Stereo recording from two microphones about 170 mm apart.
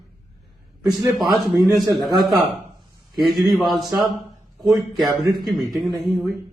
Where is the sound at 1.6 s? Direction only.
Centre (ahead or behind).